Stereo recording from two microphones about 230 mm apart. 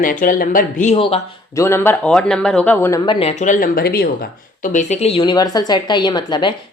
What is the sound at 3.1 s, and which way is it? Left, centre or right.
A woman's voice, left.